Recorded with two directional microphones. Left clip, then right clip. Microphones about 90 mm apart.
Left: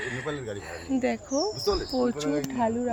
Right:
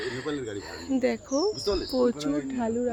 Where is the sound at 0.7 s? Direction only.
70° right (ahead or behind).